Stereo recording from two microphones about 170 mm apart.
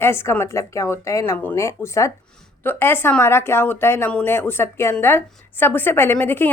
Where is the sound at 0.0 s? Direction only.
15° left (ahead or behind).